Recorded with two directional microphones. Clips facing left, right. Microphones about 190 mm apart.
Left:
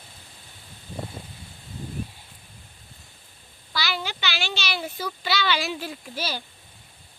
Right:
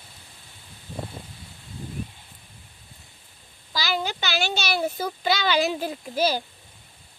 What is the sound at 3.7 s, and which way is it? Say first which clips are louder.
A child's voice: right 3 dB; 40° right (ahead or behind).